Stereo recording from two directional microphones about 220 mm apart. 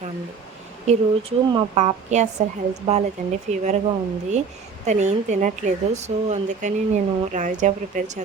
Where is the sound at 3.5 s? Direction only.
30° right (ahead or behind).